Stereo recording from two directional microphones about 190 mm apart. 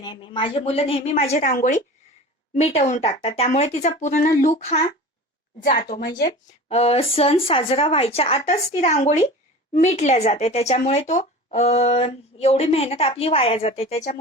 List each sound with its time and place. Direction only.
0.0 s speech: 25° left (ahead or behind)
5.6 s a woman's voice: 50° left (ahead or behind)
6.7 s speech: 35° left (ahead or behind)